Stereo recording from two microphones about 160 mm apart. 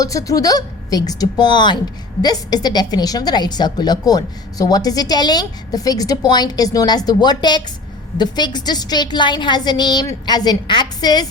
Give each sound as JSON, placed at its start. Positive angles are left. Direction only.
{"t": 0.0, "sound": "a woman's voice", "side_deg": 20}